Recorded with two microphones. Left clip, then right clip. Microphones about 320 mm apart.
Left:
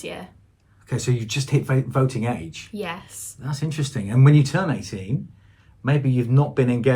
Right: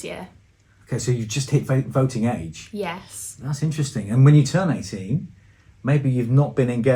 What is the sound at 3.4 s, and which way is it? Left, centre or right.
Speech, left.